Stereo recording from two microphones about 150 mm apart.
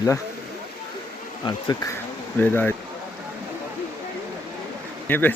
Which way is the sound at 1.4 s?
25° left (ahead or behind).